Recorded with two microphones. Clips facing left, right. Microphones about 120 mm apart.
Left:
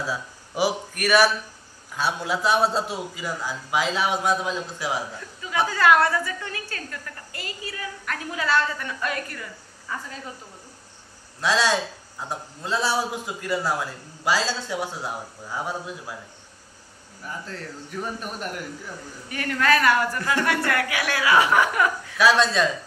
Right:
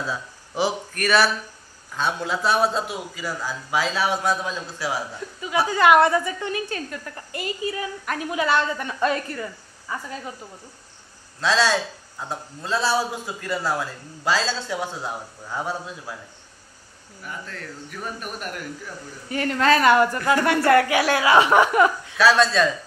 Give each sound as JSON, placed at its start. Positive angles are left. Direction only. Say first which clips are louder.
{"t": 0.0, "sound": "a man's voice", "louder": "even", "side_deg": 10}
{"t": 2.6, "sound": "a man's voice", "louder": "even", "side_deg": 30}
{"t": 3.2, "sound": "a man's voice", "louder": "right 1 dB", "side_deg": 20}
{"t": 5.7, "sound": "a woman's voice", "louder": "right 3 dB", "side_deg": -20}
{"t": 11.4, "sound": "a man's voice", "louder": "right 1 dB", "side_deg": 15}
{"t": 17.2, "sound": "a man's voice", "louder": "left 1 dB", "side_deg": 30}
{"t": 19.2, "sound": "a woman's voice", "louder": "right 3 dB", "side_deg": -25}
{"t": 22.2, "sound": "a man's voice", "louder": "right 2 dB", "side_deg": 15}